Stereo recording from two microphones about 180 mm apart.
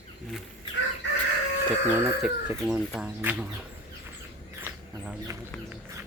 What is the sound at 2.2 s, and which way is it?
Speech, 5° right (ahead or behind).